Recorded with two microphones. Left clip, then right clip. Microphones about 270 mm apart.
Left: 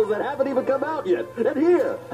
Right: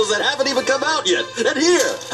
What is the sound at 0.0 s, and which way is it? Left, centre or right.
Speech, centre.